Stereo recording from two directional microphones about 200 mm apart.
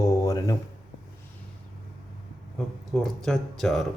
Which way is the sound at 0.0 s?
15° left (ahead or behind).